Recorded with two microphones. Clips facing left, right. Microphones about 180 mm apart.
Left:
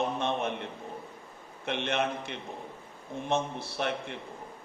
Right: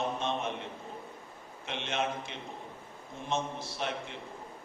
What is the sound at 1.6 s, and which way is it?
A man's voice, 60° left (ahead or behind).